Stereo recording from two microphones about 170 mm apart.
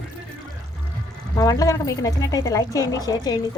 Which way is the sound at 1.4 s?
20° left (ahead or behind).